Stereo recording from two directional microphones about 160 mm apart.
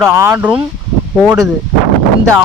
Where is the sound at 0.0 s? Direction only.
15° right (ahead or behind).